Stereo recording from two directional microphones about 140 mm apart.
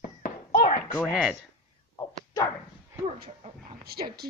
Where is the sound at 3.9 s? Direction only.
90° right.